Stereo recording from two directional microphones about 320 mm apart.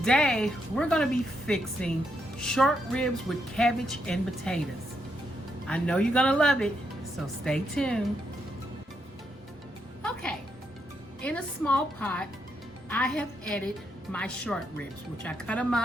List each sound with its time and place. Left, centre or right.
0.0 s speech: centre
5.6 s speech: centre
10.0 s music: centre
11.2 s speech: centre